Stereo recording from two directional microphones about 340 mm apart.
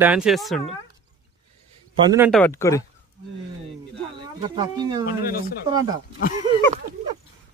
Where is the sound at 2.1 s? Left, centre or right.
Centre.